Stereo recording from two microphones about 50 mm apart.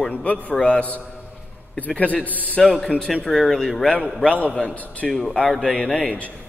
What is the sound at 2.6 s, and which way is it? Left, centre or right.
A man's voice, centre.